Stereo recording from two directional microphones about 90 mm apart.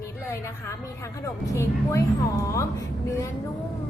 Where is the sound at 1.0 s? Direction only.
35° left (ahead or behind).